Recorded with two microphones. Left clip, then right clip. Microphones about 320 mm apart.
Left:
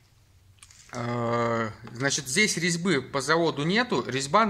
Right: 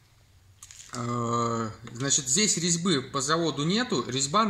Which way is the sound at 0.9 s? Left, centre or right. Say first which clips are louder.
Left 1 dB; left.